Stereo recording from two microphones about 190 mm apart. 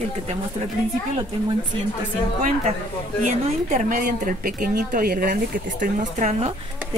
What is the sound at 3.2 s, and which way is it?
Speech, 40° right (ahead or behind).